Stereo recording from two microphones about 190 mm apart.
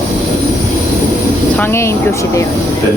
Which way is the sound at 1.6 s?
15° left (ahead or behind).